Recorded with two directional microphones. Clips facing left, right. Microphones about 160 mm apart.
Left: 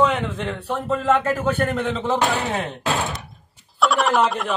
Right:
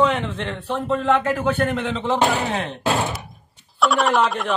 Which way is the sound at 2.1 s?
15° right (ahead or behind).